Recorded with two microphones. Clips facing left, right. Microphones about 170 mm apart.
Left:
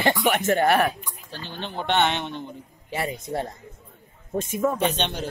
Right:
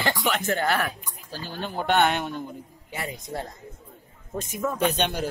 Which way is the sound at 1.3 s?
5° right (ahead or behind).